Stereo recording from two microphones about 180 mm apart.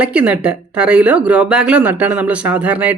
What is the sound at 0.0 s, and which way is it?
Speech, 5° right (ahead or behind).